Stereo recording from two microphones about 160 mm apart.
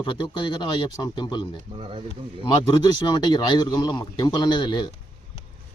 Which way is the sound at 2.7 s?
25° left (ahead or behind).